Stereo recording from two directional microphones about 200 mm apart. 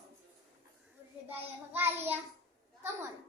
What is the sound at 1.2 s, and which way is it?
Speech, 10° right (ahead or behind).